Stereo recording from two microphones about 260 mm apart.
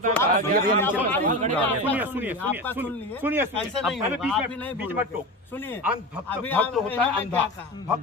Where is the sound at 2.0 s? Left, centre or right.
Centre.